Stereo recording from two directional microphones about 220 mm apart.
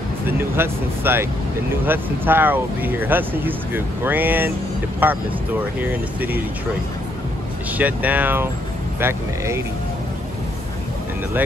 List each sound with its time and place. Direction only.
0.3 s speech: 10° right (ahead or behind)
7.7 s speech: 5° right (ahead or behind)